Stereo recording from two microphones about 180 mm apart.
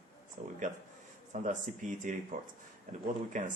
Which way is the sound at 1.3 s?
40° right (ahead or behind).